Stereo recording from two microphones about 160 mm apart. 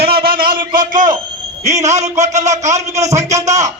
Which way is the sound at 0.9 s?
55° right (ahead or behind).